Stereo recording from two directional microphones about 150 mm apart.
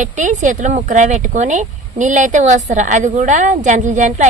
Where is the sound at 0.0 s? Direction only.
55° right (ahead or behind).